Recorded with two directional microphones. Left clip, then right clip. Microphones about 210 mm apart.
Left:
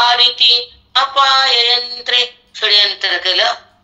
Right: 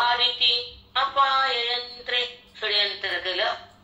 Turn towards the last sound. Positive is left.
turn(degrees=45)  # may be behind; listen again after turning